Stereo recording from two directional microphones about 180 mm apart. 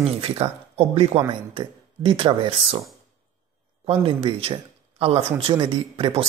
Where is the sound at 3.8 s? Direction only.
30° right (ahead or behind).